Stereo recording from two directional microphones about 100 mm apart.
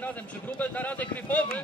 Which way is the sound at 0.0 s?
15° left (ahead or behind).